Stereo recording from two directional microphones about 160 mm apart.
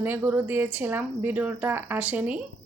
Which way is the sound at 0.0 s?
10° right (ahead or behind).